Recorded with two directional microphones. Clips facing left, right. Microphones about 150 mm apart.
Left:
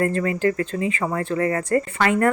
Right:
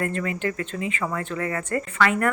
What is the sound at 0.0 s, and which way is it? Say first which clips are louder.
Speech: left 6 dB; 35° left (ahead or behind).